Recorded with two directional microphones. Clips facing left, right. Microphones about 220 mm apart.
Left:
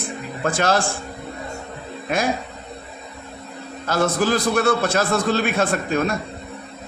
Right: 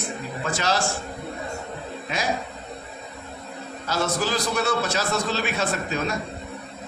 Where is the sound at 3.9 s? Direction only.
55° left (ahead or behind).